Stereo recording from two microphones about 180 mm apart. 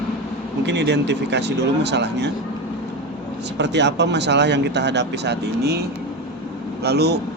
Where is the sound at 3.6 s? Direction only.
70° right (ahead or behind).